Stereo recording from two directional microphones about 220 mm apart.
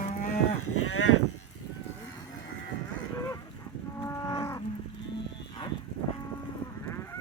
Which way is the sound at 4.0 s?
15° left (ahead or behind).